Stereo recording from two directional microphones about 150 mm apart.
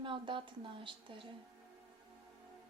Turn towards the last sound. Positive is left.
turn(degrees=-35)  # may be behind; listen again after turning